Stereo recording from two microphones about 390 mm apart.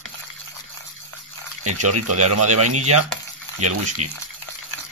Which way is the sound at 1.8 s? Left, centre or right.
Right.